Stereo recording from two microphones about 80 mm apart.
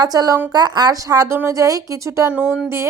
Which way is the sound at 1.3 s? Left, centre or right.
Right.